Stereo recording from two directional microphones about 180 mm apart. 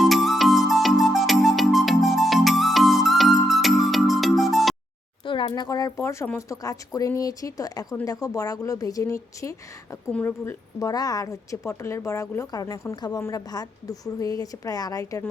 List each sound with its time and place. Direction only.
0.0 s music: centre (ahead or behind)
5.2 s a woman's voice: 25° left (ahead or behind)